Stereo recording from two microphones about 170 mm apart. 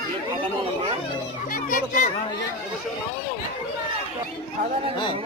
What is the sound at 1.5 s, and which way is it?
Speech, 55° left (ahead or behind).